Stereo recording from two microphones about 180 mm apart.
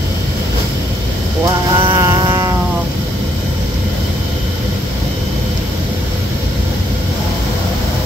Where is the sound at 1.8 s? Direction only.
20° right (ahead or behind).